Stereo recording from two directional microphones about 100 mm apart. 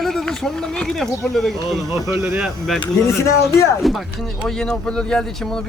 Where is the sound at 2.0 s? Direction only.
30° right (ahead or behind).